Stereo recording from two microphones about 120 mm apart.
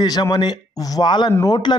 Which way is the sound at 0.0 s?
35° left (ahead or behind).